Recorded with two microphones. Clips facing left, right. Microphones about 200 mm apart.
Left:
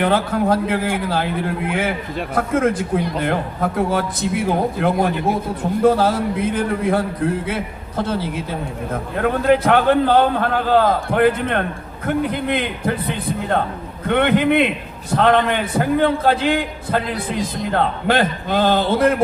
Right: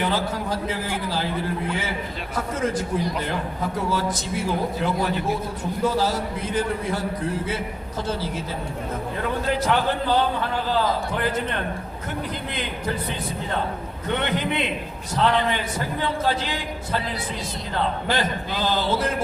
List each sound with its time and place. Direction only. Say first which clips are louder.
0.0 s a man's voice: left 7 dB; 55° left (ahead or behind)